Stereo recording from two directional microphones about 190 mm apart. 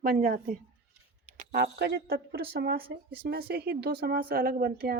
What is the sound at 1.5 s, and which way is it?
Speech, 55° right (ahead or behind).